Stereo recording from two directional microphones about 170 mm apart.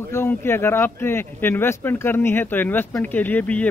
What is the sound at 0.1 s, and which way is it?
A man's voice, 15° left (ahead or behind).